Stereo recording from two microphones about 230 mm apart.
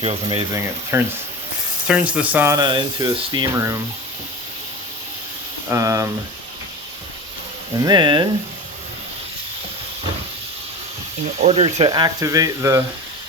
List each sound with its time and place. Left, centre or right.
0.0 s speech: right
5.6 s speech: centre
7.8 s speech: centre
11.4 s speech: right